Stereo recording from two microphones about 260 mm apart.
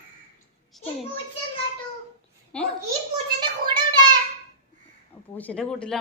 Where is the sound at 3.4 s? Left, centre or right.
Centre.